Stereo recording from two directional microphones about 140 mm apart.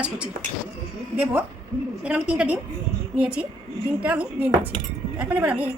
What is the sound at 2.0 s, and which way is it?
A woman's voice, 10° right (ahead or behind).